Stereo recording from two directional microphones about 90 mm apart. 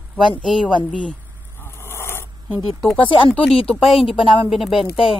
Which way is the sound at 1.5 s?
25° left (ahead or behind).